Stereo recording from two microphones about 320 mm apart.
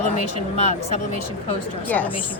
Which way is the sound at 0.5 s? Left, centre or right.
Centre.